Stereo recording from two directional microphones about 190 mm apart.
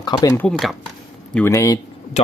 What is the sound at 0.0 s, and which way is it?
Speech, 20° left (ahead or behind).